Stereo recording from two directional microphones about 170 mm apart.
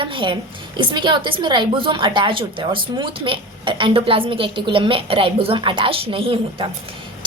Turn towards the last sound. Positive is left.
turn(degrees=-35)  # may be behind; listen again after turning